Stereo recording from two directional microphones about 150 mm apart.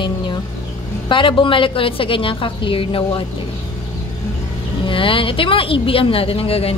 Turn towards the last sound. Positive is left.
turn(degrees=40)  # may be behind; listen again after turning